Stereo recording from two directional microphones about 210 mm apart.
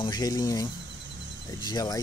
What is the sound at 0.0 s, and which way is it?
Speech, 20° left (ahead or behind).